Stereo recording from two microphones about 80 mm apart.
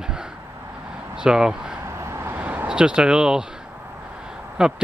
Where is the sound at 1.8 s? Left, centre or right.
Right; by 4.8 s centre.